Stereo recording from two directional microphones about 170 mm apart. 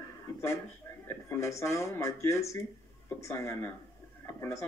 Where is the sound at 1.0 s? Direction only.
15° left (ahead or behind).